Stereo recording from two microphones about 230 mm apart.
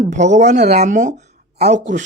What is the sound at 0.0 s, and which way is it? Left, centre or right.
Speech, right.